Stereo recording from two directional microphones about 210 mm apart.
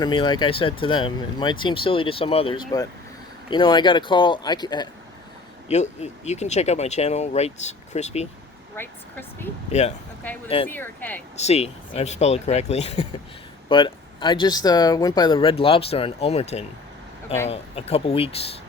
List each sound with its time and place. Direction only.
0.0 s speech: 20° left (ahead or behind)
5.6 s speech: 30° left (ahead or behind)
8.7 s speech: 10° left (ahead or behind)
9.7 s speech: 30° left (ahead or behind)
10.7 s speech: 10° left (ahead or behind)
11.3 s speech: 30° left (ahead or behind)